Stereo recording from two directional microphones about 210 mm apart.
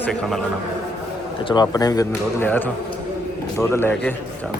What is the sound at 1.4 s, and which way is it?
A man's voice, 20° left (ahead or behind).